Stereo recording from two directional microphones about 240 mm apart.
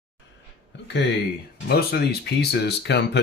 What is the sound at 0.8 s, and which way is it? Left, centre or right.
Speech, left.